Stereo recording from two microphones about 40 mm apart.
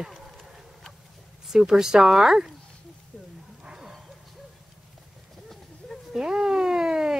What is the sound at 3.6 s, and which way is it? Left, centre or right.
Bow-wow, centre.